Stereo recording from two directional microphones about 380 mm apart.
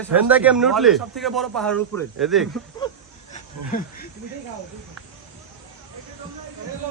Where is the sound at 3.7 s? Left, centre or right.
Left.